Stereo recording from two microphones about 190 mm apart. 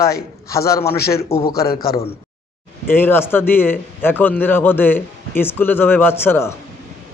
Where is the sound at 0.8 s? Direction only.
55° left (ahead or behind).